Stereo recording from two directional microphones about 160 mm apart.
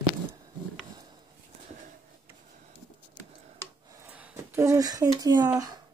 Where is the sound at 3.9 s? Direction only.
15° right (ahead or behind).